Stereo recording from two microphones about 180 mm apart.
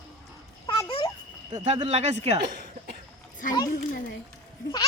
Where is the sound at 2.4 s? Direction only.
65° right (ahead or behind).